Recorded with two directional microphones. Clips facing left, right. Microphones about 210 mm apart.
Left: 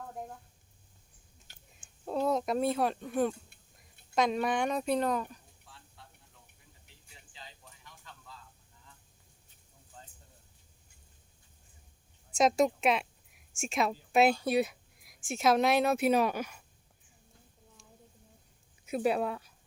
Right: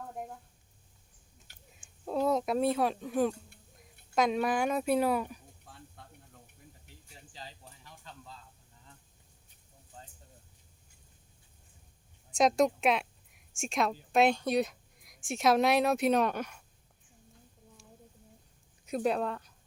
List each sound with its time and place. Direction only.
1.7 s speech: centre (ahead or behind)
5.6 s snake: 50° right (ahead or behind)
7.3 s a sound: 35° right (ahead or behind)
12.3 s a woman's voice: centre (ahead or behind)
18.9 s speech: 5° left (ahead or behind)